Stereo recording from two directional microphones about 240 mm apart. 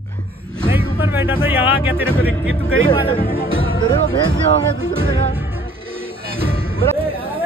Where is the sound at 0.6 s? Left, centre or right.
Centre.